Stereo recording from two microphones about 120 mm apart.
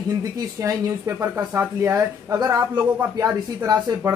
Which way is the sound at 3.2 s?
30° right (ahead or behind).